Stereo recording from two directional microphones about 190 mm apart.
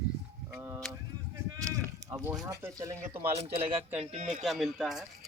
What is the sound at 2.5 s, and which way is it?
Speech, 15° right (ahead or behind).